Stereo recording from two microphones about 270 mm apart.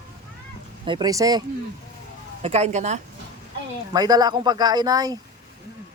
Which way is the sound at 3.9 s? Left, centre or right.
Centre.